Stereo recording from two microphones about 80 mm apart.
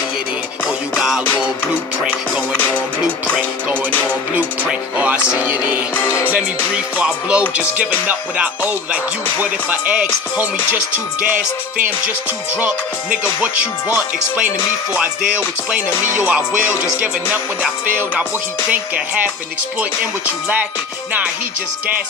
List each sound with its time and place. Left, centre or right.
0.9 s music: centre
4.4 s speech: centre
12.5 s speech: centre
18.7 s speech: centre